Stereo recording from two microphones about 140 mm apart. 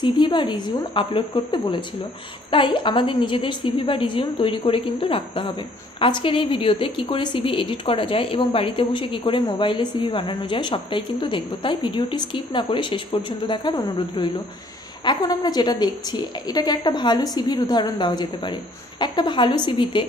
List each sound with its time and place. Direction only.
0.0 s a woman's voice: 35° left (ahead or behind)